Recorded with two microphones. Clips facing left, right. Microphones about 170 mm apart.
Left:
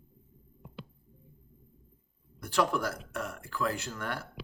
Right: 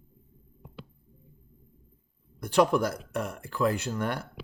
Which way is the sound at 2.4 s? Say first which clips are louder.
Right 6 dB; 20° right (ahead or behind).